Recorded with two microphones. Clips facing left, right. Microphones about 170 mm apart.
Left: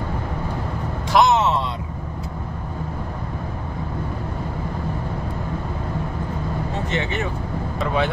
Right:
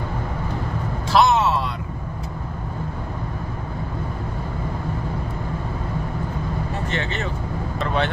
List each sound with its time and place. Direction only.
1.1 s vehicle: 20° left (ahead or behind)
6.9 s vehicle: 15° left (ahead or behind)